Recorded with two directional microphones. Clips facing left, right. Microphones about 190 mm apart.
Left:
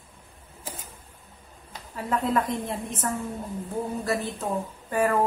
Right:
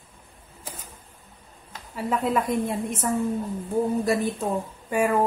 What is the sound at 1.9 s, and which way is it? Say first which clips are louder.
A woman's voice: right 1 dB; 10° right (ahead or behind).